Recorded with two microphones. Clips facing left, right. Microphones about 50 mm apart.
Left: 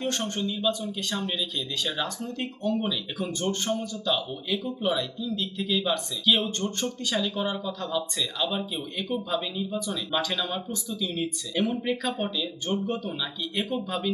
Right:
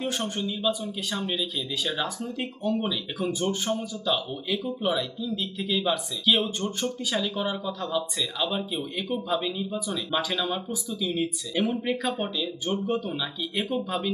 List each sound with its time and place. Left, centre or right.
0.0 s speech: centre